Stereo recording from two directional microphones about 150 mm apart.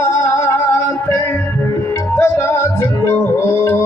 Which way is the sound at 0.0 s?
20° left (ahead or behind).